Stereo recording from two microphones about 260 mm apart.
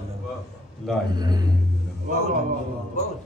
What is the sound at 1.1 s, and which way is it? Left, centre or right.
Speech, centre.